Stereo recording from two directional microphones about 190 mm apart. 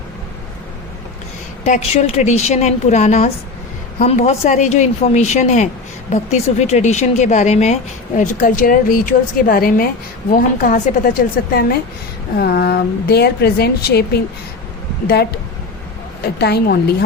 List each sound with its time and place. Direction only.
1.6 s a woman's voice: 35° left (ahead or behind); by 15.4 s 60° left (ahead or behind)
16.4 s speech: 55° left (ahead or behind)